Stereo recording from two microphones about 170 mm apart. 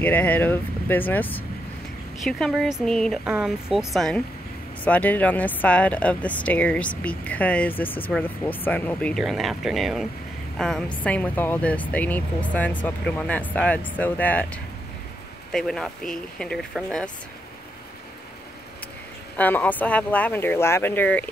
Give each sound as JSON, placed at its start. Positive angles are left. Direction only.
{"t": 0.0, "sound": "speech", "side_deg": 10}
{"t": 19.3, "sound": "speech", "side_deg": 10}